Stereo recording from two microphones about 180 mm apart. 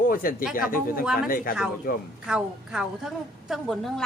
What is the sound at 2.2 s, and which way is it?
A woman's voice, 5° right (ahead or behind).